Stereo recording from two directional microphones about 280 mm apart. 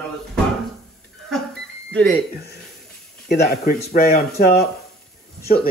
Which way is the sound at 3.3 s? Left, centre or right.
Left.